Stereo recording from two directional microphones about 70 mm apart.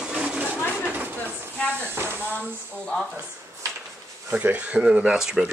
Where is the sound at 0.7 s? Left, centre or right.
Right.